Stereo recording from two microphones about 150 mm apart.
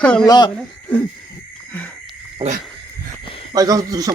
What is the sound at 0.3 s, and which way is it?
Speech, 30° left (ahead or behind).